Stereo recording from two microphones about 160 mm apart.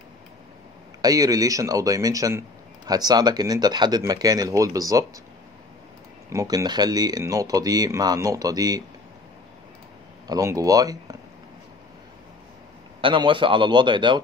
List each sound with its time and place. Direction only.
1.0 s speech: 20° right (ahead or behind)
6.3 s speech: 25° right (ahead or behind)
10.2 s speech: 20° right (ahead or behind)
13.0 s speech: 30° right (ahead or behind)